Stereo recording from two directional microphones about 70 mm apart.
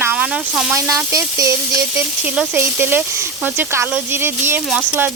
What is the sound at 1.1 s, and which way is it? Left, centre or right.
Speech, right.